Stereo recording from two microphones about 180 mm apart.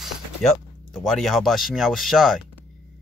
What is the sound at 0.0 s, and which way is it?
Speech, centre (ahead or behind).